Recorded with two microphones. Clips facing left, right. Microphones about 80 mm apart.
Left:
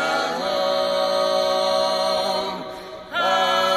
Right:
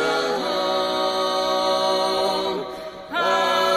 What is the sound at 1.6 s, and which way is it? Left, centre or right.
Music, centre.